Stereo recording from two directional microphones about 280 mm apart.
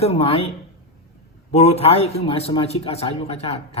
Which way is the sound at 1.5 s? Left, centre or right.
Left.